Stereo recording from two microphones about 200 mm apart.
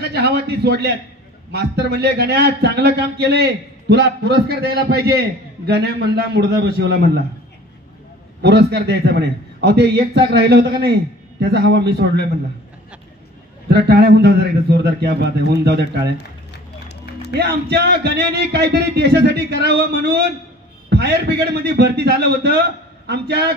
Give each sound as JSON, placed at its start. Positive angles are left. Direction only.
{"t": 0.0, "sound": "a man's voice", "side_deg": -55}
{"t": 8.4, "sound": "a man's voice", "side_deg": -55}
{"t": 13.7, "sound": "a man's voice", "side_deg": -55}
{"t": 16.8, "sound": "music", "side_deg": 55}
{"t": 17.3, "sound": "a man's voice", "side_deg": -55}